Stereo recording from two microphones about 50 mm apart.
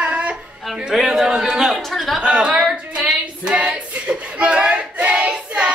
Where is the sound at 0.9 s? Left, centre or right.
Centre.